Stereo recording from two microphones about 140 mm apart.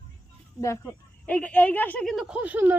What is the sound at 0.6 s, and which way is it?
Speech, 15° left (ahead or behind).